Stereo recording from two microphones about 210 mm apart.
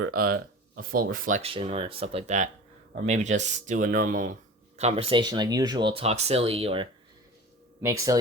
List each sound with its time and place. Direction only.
0.1 s speech: 45° right (ahead or behind)
1.4 s speech: 30° right (ahead or behind)
7.8 s speech: 15° right (ahead or behind)